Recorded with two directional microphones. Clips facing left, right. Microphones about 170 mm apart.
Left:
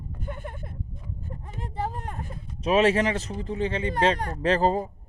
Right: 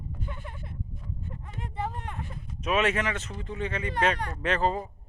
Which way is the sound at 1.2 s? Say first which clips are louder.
Left 2 dB; 40° left (ahead or behind).